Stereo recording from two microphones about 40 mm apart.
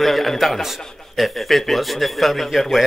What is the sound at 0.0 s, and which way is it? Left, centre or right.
A man's voice, centre.